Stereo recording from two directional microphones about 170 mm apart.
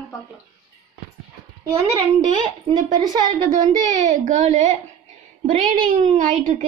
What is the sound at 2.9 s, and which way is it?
Speech, 25° right (ahead or behind).